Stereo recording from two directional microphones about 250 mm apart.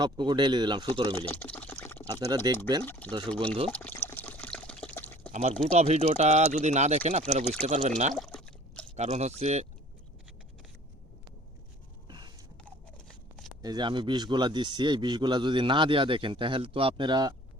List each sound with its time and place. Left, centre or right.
0.0 s speech: centre
1.2 s a sound: centre
2.3 s speech: centre
2.8 s speech: centre
3.3 s speech: right
3.7 s water: centre
5.3 s speech: right
8.1 s a sound: centre
9.0 s speech: right
12.0 s a sound: centre
13.6 s speech: centre